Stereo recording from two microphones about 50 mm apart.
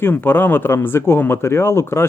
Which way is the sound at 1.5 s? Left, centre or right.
Left.